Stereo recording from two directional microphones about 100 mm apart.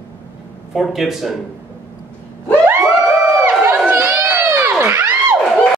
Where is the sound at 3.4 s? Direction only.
25° right (ahead or behind).